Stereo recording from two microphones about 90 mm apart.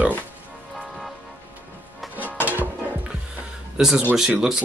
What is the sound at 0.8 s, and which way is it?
Vehicle, centre (ahead or behind).